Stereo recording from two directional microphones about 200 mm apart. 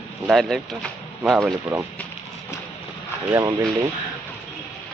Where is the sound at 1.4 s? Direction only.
15° right (ahead or behind).